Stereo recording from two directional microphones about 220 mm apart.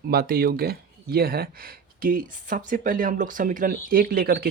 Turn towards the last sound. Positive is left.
turn(degrees=-45)  # may be behind; listen again after turning